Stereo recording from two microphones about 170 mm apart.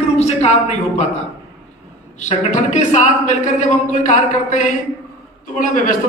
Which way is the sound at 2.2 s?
45° left (ahead or behind).